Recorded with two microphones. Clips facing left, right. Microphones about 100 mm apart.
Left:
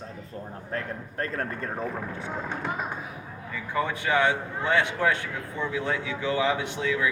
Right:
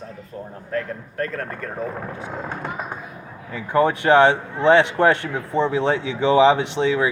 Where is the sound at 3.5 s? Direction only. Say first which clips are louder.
Right 10 dB; 65° right (ahead or behind).